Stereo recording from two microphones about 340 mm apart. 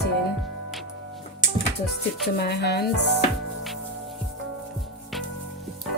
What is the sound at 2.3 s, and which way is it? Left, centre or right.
Speech, left.